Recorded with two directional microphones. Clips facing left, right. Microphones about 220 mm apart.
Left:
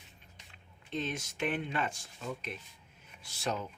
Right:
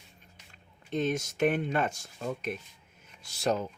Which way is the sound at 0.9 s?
45° right (ahead or behind).